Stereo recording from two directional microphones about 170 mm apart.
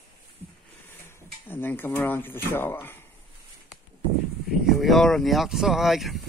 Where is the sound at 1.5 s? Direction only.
10° left (ahead or behind).